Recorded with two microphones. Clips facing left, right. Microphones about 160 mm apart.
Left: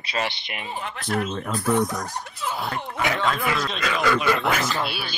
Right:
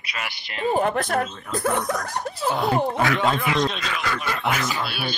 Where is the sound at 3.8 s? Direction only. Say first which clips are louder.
Left 5 dB; 90° left.